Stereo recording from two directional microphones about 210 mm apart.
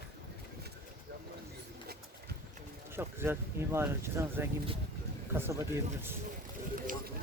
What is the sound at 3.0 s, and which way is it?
Speech, 10° right (ahead or behind).